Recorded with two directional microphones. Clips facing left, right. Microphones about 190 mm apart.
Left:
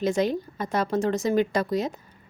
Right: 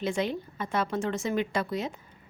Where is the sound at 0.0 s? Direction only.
40° left (ahead or behind).